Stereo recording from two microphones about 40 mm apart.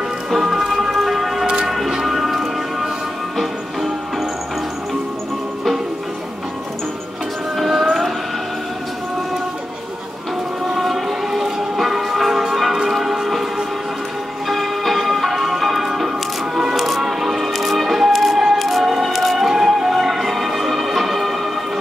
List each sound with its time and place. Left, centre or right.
0.3 s music: centre
1.0 s siren: centre
1.4 s music: right
1.7 s music: centre
7.5 s music: centre
10.7 s music: centre
14.5 s change ringing: centre
16.5 s music: centre